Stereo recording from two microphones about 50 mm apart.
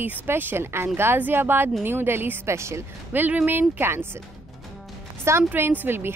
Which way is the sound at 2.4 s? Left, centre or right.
Right.